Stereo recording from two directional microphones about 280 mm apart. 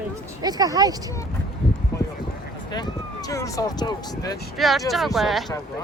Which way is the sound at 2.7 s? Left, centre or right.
Centre.